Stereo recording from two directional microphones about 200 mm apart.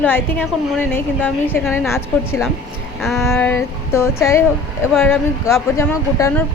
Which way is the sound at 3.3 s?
10° left (ahead or behind).